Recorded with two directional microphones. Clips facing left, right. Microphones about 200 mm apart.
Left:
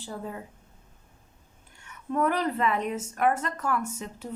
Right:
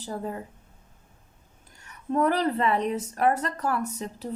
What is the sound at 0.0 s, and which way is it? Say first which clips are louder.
Speech: right 4 dB; 40° right (ahead or behind).